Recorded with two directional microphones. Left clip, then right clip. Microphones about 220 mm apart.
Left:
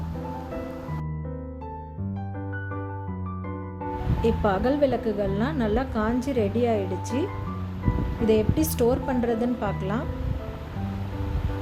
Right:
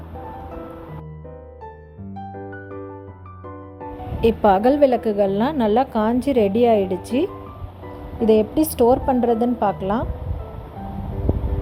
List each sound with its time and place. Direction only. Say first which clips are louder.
4.2 s a woman's voice: right 9 dB; 35° right (ahead or behind)
8.3 s a woman's voice: right 6 dB; 30° right (ahead or behind)